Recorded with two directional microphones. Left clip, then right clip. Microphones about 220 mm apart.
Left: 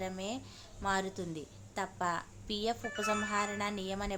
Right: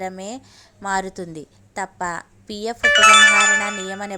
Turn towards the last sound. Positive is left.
turn(degrees=-35)  # may be behind; listen again after turning